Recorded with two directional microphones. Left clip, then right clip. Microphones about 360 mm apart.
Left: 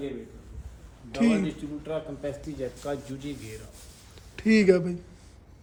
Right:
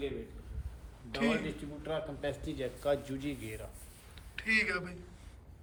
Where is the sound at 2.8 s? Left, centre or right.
Right.